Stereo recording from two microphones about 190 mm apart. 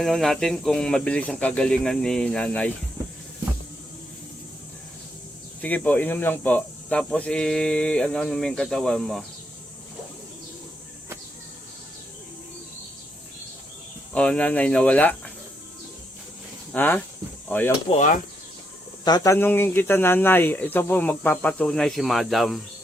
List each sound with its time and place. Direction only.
0.0 s speech: centre (ahead or behind)
5.6 s speech: 10° left (ahead or behind)
14.1 s speech: 5° left (ahead or behind)
16.7 s speech: 10° left (ahead or behind)
17.9 s speech: 40° left (ahead or behind)
19.0 s speech: 20° left (ahead or behind); by 22.6 s centre (ahead or behind)